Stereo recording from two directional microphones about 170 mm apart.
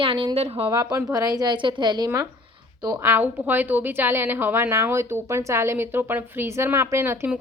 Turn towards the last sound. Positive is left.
turn(degrees=-15)  # may be behind; listen again after turning